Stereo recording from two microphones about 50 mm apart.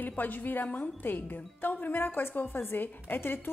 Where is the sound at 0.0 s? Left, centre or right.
Left.